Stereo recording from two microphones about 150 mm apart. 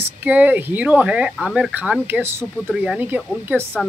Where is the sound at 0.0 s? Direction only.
10° right (ahead or behind).